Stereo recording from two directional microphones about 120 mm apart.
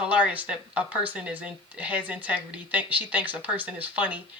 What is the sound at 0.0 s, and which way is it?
Speech, 10° right (ahead or behind).